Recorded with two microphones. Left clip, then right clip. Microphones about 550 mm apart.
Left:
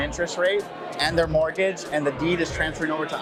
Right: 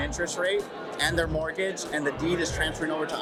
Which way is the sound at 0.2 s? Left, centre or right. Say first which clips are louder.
Left 4 dB; centre.